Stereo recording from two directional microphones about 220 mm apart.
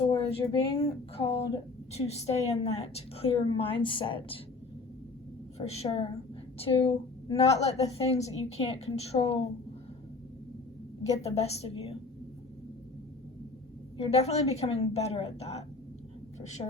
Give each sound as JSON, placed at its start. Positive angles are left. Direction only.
{"t": 0.0, "sound": "a woman's voice", "side_deg": 20}
{"t": 5.5, "sound": "a woman's voice", "side_deg": 30}
{"t": 11.1, "sound": "a woman's voice", "side_deg": 30}
{"t": 14.0, "sound": "a woman's voice", "side_deg": 30}